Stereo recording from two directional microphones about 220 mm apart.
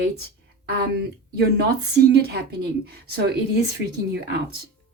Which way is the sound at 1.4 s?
45° right (ahead or behind).